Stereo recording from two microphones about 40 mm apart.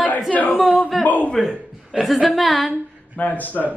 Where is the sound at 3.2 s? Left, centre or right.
Left.